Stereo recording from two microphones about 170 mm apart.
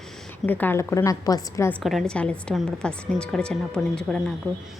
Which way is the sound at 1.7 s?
Centre (ahead or behind).